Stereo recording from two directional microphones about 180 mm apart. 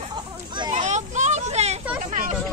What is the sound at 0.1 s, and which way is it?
Children playing, 25° right (ahead or behind).